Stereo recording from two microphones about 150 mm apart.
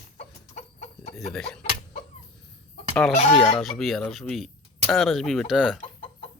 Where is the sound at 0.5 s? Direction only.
50° left (ahead or behind).